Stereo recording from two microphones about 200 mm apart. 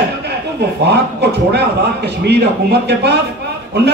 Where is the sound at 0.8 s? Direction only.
55° right (ahead or behind).